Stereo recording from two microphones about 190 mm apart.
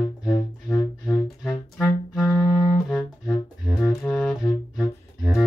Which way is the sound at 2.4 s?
20° left (ahead or behind).